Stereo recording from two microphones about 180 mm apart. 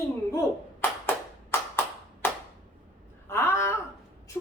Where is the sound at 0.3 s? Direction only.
15° left (ahead or behind).